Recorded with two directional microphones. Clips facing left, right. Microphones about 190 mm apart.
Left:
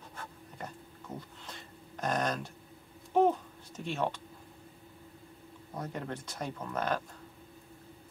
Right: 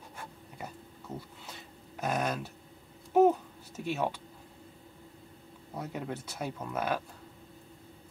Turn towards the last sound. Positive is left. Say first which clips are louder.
# right 1 dB
turn(degrees=-10)  # may be behind; listen again after turning